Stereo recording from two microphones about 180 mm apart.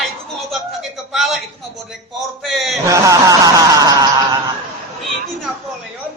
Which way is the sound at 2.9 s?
20° right (ahead or behind).